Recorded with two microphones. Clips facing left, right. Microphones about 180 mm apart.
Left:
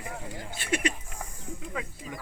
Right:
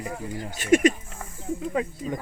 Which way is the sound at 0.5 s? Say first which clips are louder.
Right 11 dB; 45° right (ahead or behind).